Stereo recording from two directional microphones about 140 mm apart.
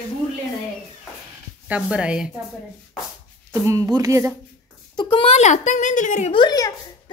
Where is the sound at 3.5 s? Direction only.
20° right (ahead or behind).